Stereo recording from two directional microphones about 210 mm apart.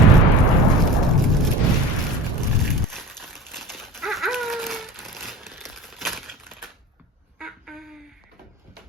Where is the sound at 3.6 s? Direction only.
Centre (ahead or behind).